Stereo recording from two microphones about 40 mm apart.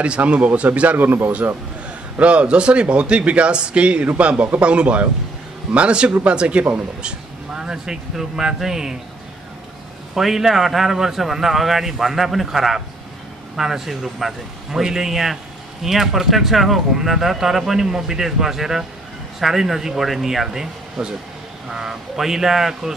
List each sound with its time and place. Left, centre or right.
0.2 s a man's voice: right
2.1 s a man's voice: right; by 8.9 s centre
10.1 s a man's voice: centre